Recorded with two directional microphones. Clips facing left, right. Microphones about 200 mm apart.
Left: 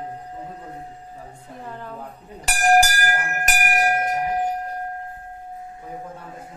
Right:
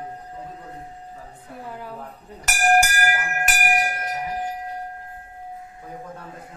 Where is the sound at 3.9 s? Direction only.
50° left (ahead or behind).